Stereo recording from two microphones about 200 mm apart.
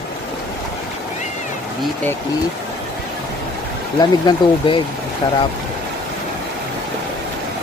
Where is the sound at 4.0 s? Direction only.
20° left (ahead or behind).